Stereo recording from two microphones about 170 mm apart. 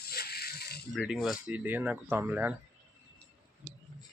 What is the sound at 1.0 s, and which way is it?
Speech, centre (ahead or behind).